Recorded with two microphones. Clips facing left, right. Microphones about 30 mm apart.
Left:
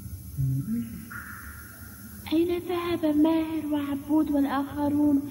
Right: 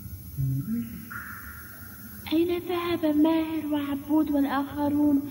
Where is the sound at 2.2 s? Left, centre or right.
Centre.